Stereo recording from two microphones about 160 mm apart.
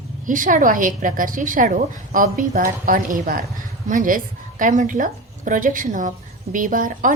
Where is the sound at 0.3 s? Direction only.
55° right (ahead or behind).